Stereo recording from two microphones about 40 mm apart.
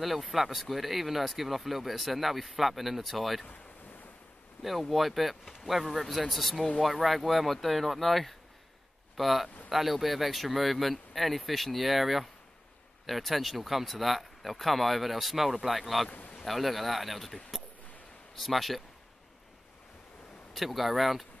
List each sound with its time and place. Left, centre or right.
0.0 s speech: centre
4.6 s speech: centre
16.1 s a sound: left
16.4 s speech: centre
20.5 s speech: centre